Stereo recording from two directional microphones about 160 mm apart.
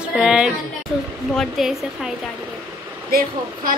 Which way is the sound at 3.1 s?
70° right (ahead or behind).